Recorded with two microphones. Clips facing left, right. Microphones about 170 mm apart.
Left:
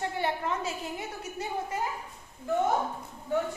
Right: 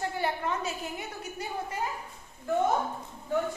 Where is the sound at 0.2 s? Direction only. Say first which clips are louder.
Left 1 dB; 25° left (ahead or behind).